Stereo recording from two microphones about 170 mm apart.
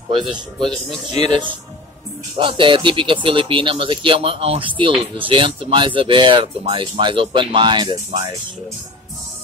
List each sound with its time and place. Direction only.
1.1 s speech: 40° left (ahead or behind)
2.3 s speech: 30° right (ahead or behind)